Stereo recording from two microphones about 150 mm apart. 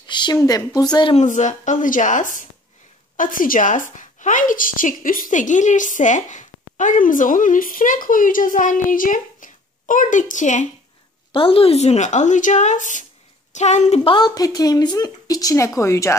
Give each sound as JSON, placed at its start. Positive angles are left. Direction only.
{"t": 0.1, "sound": "a sound", "side_deg": 30}
{"t": 0.4, "sound": "speech", "side_deg": 20}
{"t": 1.1, "sound": "a woman's voice", "side_deg": 55}
{"t": 11.3, "sound": "speech", "side_deg": 40}
{"t": 14.1, "sound": "speech", "side_deg": 25}